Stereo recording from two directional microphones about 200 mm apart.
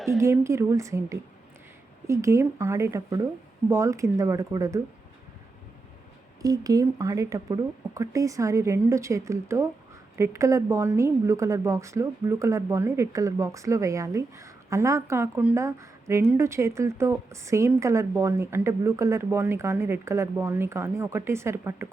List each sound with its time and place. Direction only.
0.2 s speech: 15° right (ahead or behind)
6.4 s speech: 20° right (ahead or behind)